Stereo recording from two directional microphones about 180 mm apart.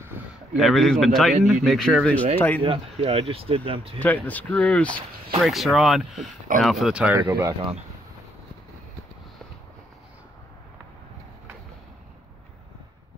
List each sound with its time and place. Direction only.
0.2 s a sound: 10° right (ahead or behind)
0.6 s speech: centre (ahead or behind)
2.6 s speech: 30° right (ahead or behind)
4.0 s speech: 10° left (ahead or behind); by 7.5 s 15° right (ahead or behind)